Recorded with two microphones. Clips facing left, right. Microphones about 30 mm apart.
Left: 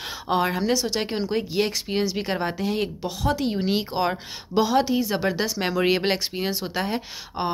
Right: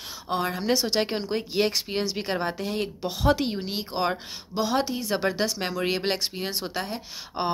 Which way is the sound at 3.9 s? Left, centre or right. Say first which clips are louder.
Left 2 dB; centre.